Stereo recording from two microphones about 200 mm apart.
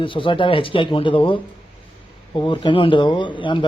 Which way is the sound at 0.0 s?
25° left (ahead or behind).